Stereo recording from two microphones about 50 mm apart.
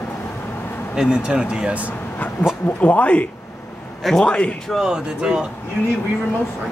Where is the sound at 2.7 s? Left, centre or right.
Left.